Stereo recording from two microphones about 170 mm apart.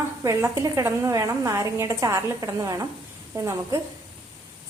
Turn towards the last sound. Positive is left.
turn(degrees=-20)  # may be behind; listen again after turning